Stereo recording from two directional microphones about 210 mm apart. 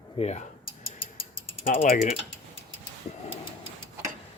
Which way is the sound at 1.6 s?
40° left (ahead or behind).